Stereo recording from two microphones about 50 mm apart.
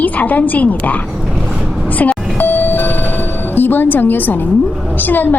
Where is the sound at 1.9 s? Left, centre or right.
Left.